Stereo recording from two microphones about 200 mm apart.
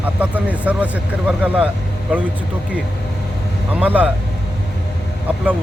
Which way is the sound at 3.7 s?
10° right (ahead or behind).